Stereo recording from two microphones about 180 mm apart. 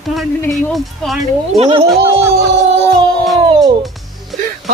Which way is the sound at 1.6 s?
30° right (ahead or behind).